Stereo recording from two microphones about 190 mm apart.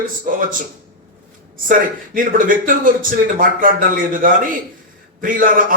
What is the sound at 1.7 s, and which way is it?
Speech, 45° right (ahead or behind).